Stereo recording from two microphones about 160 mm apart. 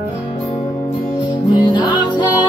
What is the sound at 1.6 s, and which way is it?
Music, 30° left (ahead or behind).